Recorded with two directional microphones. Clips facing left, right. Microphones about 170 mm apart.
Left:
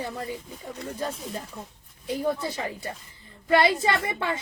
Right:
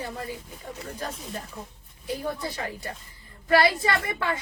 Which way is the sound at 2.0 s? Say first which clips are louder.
Left 4 dB; 20° left (ahead or behind).